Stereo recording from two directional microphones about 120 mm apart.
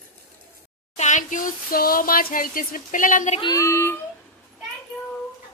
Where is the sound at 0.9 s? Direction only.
90° left.